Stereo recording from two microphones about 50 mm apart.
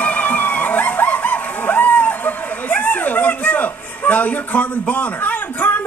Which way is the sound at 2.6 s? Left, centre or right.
Left.